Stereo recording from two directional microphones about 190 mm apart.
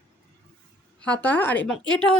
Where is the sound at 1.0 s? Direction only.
5° left (ahead or behind).